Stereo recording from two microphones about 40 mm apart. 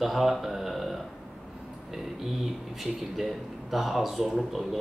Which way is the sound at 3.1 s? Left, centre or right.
Centre.